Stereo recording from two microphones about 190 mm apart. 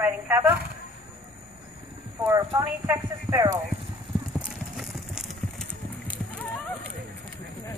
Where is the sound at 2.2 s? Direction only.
15° right (ahead or behind).